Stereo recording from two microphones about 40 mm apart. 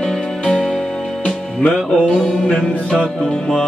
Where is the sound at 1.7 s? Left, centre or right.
Centre.